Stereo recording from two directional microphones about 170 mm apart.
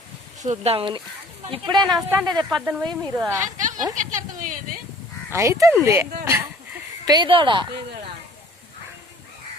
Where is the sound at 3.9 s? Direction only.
50° right (ahead or behind).